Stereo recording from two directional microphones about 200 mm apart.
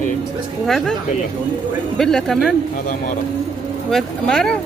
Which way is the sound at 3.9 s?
Centre (ahead or behind).